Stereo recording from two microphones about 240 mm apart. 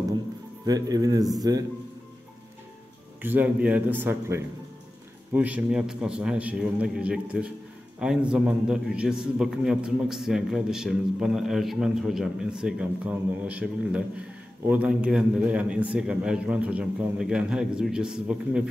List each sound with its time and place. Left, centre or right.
0.7 s a man's voice: centre
3.2 s a man's voice: centre